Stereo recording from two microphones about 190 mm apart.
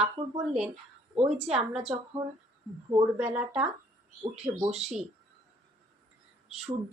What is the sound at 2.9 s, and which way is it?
Speech, 15° right (ahead or behind).